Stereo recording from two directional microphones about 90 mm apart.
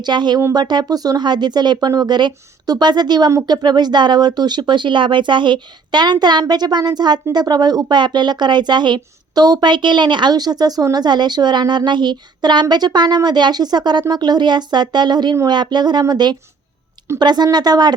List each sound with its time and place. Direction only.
0.0 s speech: 55° right (ahead or behind)